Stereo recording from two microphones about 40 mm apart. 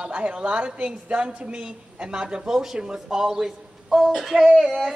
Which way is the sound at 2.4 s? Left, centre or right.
Centre.